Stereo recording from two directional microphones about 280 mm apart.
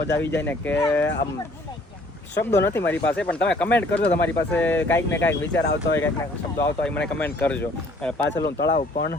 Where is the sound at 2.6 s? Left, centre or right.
Centre.